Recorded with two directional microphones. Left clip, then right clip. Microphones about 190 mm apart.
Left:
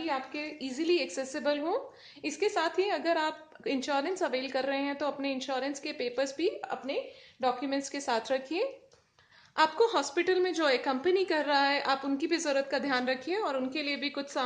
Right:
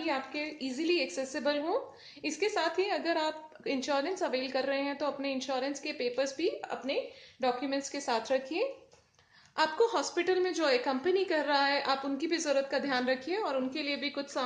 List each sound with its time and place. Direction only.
0.0 s a woman's voice: 25° left (ahead or behind)